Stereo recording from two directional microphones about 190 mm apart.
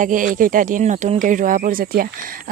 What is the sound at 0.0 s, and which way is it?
Speech, 45° right (ahead or behind).